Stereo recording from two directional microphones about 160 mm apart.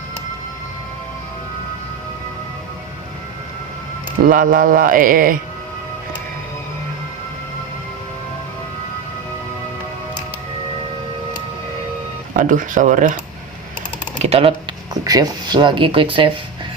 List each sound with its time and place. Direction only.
4.2 s speech: 55° right (ahead or behind)
12.4 s speech: 55° right (ahead or behind)
14.2 s typing: 40° right (ahead or behind)
15.0 s speech: 25° right (ahead or behind)